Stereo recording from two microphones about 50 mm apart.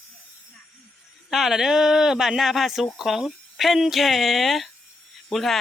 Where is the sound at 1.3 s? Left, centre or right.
Centre.